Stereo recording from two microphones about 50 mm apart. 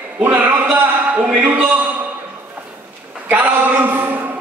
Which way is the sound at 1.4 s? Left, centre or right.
Right.